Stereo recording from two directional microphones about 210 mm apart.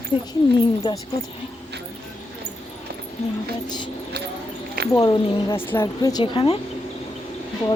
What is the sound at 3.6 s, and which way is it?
Speech, 20° left (ahead or behind).